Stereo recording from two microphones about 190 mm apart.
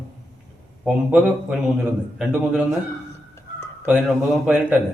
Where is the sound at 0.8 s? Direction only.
5° right (ahead or behind).